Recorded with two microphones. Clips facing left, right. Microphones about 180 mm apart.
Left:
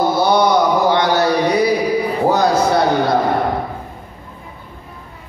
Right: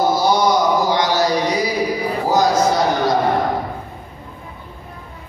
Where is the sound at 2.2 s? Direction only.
60° left (ahead or behind).